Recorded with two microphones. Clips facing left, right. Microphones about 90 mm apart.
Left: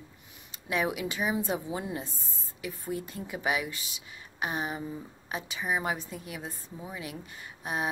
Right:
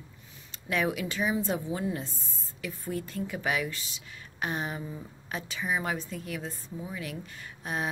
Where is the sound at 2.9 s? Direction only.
50° right (ahead or behind).